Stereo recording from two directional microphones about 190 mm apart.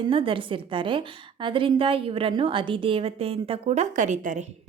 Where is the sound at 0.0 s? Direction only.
25° right (ahead or behind).